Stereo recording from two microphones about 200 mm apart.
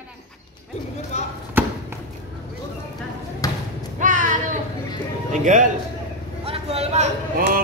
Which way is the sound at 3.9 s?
40° right (ahead or behind).